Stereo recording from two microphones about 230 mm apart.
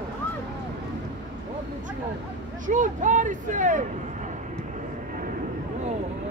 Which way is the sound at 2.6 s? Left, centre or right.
Right.